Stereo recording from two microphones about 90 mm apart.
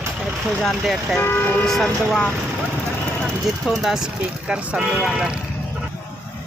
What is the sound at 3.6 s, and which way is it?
Speech, 5° right (ahead or behind).